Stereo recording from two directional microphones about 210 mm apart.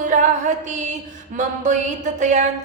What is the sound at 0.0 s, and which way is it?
Music, 35° right (ahead or behind).